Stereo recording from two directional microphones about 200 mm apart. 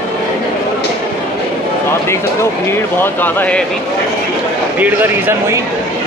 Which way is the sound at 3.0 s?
10° left (ahead or behind).